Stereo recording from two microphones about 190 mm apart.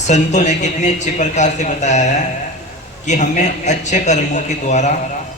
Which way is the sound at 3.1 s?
40° left (ahead or behind).